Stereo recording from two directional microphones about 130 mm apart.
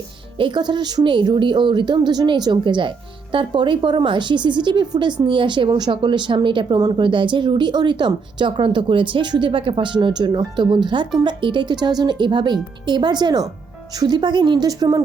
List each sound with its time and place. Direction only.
0.3 s a woman's voice: 35° right (ahead or behind)